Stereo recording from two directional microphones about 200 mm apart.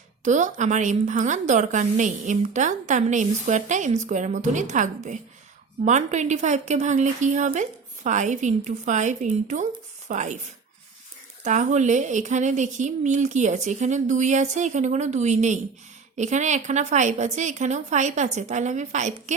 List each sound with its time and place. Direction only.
0.3 s a woman's voice: 35° right (ahead or behind)